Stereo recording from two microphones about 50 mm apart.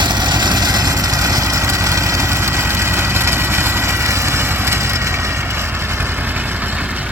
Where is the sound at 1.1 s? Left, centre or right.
Right.